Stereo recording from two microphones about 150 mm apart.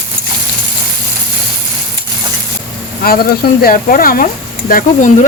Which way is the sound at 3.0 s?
80° left.